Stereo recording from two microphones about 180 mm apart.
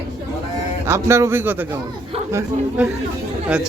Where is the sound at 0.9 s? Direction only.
15° right (ahead or behind).